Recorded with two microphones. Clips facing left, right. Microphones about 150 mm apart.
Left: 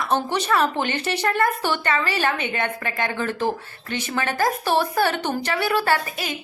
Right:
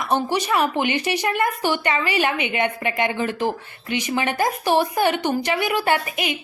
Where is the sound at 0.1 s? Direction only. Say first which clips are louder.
Right 1 dB; 10° right (ahead or behind).